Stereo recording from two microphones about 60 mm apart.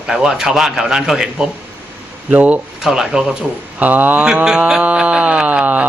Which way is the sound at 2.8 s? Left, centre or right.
Centre.